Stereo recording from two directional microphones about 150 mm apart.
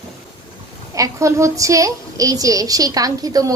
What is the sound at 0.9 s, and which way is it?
A woman's voice, 20° right (ahead or behind).